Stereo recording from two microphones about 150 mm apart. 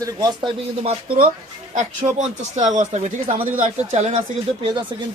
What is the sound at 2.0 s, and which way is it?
Speech, 35° right (ahead or behind).